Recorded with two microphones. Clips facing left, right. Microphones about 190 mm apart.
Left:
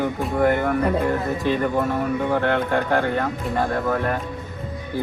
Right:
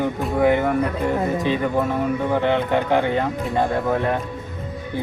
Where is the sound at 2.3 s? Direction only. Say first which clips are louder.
Right 2 dB; 10° right (ahead or behind).